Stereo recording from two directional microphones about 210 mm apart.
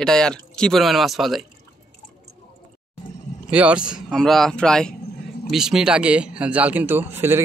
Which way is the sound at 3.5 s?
5° right (ahead or behind).